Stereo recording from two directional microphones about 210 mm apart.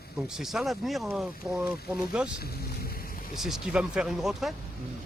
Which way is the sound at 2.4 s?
45° left (ahead or behind).